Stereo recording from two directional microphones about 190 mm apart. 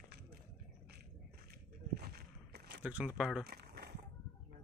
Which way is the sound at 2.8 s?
5° right (ahead or behind).